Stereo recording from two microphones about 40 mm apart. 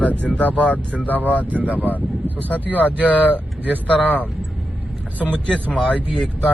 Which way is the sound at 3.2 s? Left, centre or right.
Right.